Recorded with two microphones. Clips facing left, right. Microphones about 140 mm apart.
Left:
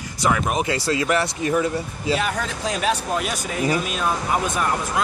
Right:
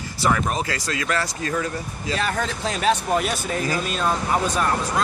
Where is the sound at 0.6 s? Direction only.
25° left (ahead or behind).